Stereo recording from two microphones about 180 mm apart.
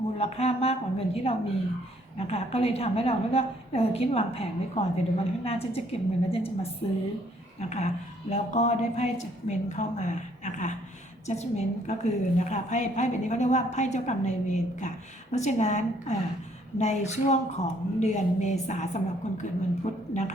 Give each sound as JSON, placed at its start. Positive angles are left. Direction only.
{"t": 0.2, "sound": "a woman's voice", "side_deg": 35}